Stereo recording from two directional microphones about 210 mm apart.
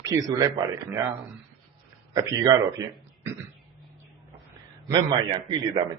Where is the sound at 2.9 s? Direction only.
5° right (ahead or behind).